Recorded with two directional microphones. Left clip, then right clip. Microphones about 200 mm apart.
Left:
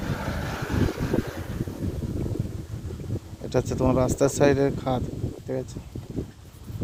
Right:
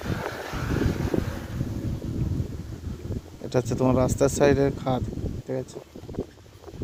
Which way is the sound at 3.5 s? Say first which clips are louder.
Even; centre (ahead or behind).